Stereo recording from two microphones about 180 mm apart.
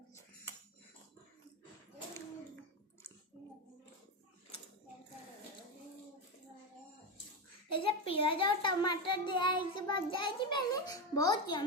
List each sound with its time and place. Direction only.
7.7 s a child's voice: 30° left (ahead or behind)